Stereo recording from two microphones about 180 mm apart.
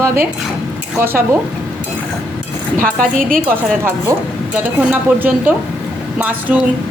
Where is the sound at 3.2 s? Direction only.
50° right (ahead or behind).